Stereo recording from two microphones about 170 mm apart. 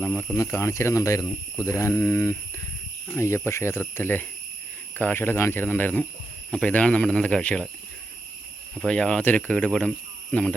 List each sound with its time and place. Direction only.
0.0 s speech: 10° left (ahead or behind)
8.7 s speech: 5° left (ahead or behind)